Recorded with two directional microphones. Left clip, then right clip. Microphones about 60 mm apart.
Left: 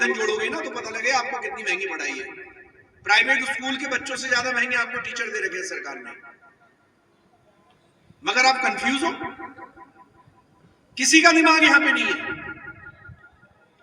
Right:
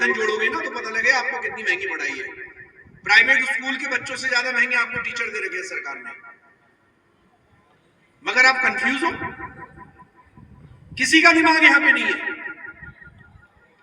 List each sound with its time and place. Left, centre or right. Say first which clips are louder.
0.0 s a man's voice: right 2 dB; left
5.6 s a man's voice: right 2 dB; right
8.2 s a man's voice: right 3 dB; left
11.0 s a man's voice: right 1 dB; left